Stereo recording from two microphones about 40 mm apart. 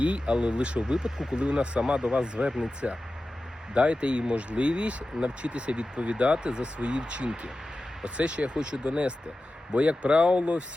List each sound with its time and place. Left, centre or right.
0.0 s speech: right